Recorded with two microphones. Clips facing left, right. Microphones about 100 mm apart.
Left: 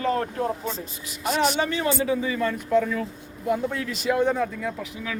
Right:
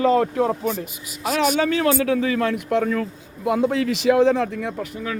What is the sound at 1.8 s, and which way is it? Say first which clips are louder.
Speech: right 5 dB; 90° right.